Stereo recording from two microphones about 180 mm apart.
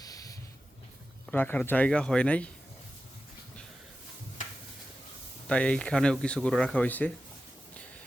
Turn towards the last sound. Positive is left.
turn(degrees=10)  # may be behind; listen again after turning